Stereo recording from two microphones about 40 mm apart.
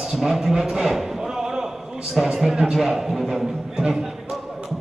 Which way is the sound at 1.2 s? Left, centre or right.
Centre.